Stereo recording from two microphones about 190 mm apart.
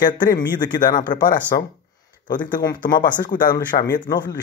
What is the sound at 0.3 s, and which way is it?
Speech, 20° left (ahead or behind).